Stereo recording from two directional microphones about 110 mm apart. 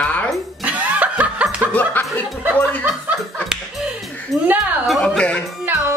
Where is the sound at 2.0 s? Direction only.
15° left (ahead or behind).